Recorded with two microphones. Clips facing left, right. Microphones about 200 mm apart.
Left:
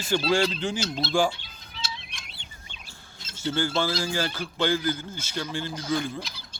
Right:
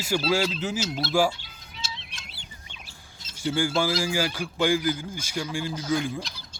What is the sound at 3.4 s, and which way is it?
A man's voice, 10° right (ahead or behind).